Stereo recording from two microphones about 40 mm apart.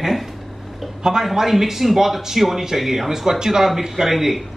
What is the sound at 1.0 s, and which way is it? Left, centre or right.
Speech, centre.